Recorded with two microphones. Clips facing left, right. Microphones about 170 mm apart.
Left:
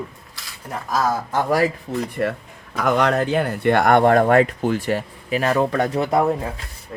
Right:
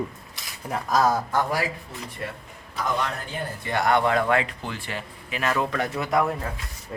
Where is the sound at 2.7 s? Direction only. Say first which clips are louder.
Left 9 dB; 75° left (ahead or behind); by 6.3 s 30° left (ahead or behind).